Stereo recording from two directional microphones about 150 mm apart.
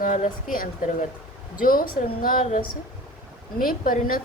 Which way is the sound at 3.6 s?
70° left (ahead or behind).